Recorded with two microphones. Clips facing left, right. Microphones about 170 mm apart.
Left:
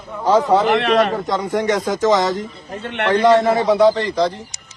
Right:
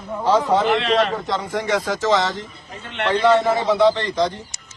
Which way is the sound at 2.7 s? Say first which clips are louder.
Left 3 dB; 60° left (ahead or behind).